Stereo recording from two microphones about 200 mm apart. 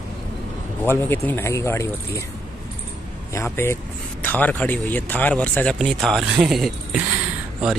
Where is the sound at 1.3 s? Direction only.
15° left (ahead or behind).